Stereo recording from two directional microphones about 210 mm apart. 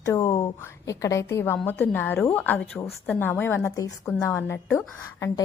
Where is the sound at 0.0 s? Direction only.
15° left (ahead or behind).